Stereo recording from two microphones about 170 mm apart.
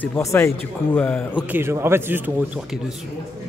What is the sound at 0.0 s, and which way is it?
Speech, 15° left (ahead or behind).